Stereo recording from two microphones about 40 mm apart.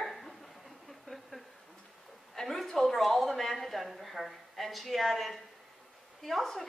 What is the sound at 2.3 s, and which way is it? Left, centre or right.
A woman's voice, centre.